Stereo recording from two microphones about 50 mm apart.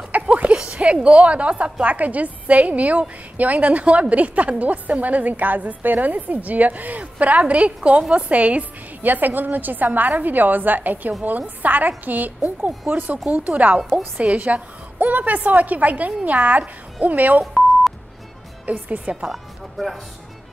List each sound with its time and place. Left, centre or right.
0.3 s a sound: right
1.0 s a woman's voice: right
18.7 s a woman's voice: right
19.2 s speech: centre